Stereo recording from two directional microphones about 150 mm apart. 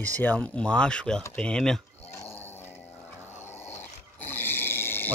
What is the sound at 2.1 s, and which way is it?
Dog, 15° left (ahead or behind).